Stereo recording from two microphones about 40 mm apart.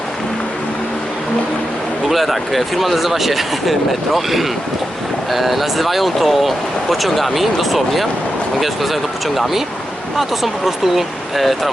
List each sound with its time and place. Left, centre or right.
2.0 s speech: centre